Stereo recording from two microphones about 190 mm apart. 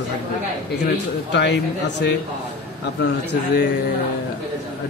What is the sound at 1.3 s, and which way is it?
Speech, 65° left (ahead or behind).